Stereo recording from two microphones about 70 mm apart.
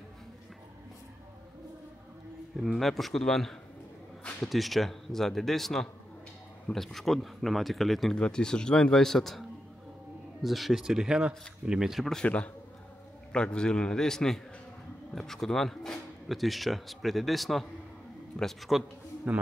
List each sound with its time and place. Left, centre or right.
2.5 s speech: centre
13.3 s speech: centre
19.3 s a man's voice: centre